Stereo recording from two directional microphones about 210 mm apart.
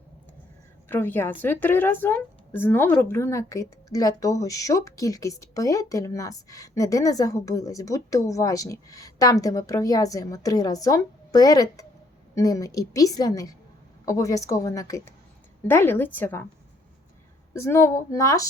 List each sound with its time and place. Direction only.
0.9 s a woman's voice: 10° left (ahead or behind)
17.5 s a woman's voice: 15° left (ahead or behind)